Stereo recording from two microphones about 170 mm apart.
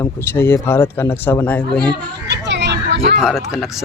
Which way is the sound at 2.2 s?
90° right.